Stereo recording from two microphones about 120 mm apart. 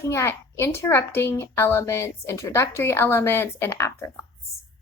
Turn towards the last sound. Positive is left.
turn(degrees=25)  # may be behind; listen again after turning